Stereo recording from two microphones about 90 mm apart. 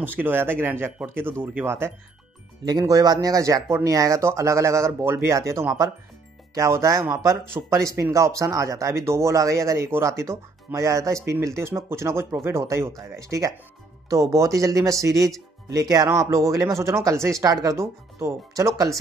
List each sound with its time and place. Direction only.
0.0 s speech: 20° right (ahead or behind)
2.8 s speech: 40° right (ahead or behind)
16.1 s speech: 35° right (ahead or behind)
17.5 s speech: 40° right (ahead or behind)